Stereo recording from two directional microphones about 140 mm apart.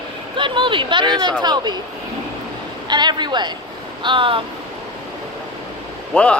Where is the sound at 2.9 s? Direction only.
30° right (ahead or behind).